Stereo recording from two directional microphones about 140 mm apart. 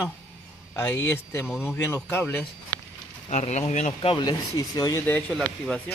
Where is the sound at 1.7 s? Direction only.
15° left (ahead or behind).